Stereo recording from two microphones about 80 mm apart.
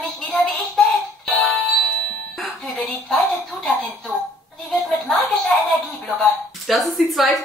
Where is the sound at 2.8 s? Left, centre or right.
Centre.